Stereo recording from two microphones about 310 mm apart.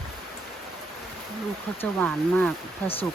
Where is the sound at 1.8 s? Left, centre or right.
Centre.